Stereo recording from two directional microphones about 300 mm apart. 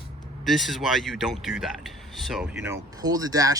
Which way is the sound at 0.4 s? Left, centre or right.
Centre.